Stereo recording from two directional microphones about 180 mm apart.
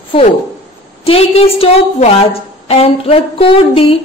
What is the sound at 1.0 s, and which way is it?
A woman's voice, 35° left (ahead or behind).